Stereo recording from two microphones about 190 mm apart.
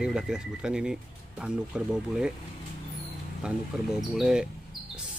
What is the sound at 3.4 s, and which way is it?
Speech, 5° right (ahead or behind).